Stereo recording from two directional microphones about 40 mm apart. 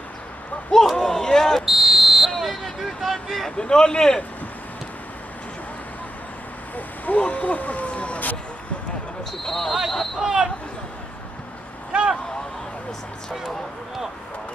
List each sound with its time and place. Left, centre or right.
0.9 s speech: centre
1.7 s a sound: centre
3.5 s a man's voice: centre
7.1 s speech: left
9.4 s speech: centre
10.2 s speech: centre
11.9 s vehicle: right